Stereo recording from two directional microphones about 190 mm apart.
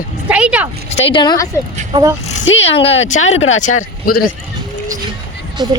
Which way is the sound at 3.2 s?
90° left.